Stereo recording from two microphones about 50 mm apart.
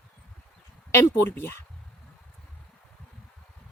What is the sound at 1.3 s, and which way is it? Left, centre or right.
Speech, left.